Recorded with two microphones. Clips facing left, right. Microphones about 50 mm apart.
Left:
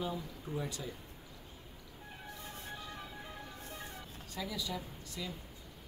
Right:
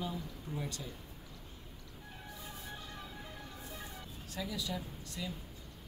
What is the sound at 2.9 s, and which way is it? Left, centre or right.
Music, centre.